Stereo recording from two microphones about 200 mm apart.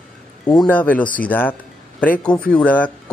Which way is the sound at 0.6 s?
10° left (ahead or behind).